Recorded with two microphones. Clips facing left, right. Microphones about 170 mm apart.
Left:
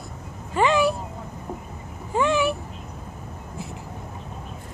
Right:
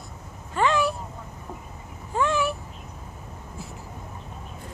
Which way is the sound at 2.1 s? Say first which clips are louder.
Left 3 dB; centre (ahead or behind).